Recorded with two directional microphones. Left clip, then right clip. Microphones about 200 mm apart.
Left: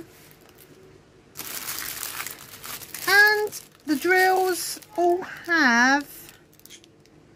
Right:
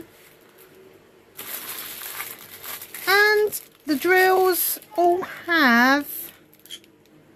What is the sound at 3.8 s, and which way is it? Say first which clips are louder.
A child's voice: right 2 dB; 15° right (ahead or behind).